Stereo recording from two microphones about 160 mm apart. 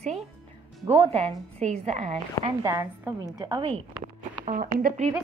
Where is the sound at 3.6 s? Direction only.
30° right (ahead or behind).